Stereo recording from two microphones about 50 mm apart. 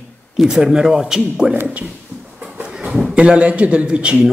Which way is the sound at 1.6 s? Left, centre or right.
Right.